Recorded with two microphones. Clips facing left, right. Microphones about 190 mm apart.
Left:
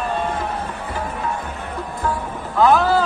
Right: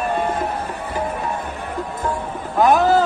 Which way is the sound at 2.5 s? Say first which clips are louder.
Right 1 dB; 20° right (ahead or behind).